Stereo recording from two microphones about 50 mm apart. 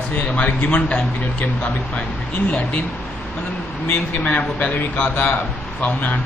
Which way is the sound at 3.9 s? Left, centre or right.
Left.